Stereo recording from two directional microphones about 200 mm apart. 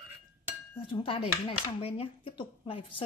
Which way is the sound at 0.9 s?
25° left (ahead or behind).